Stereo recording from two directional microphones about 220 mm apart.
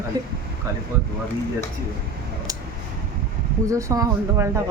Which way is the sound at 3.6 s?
15° right (ahead or behind).